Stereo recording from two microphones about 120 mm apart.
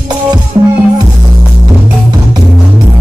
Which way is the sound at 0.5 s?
30° right (ahead or behind).